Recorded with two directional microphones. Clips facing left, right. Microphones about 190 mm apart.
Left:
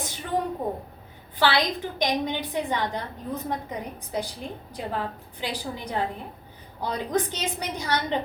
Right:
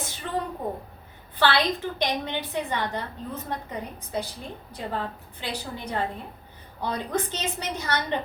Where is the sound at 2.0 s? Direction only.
15° left (ahead or behind).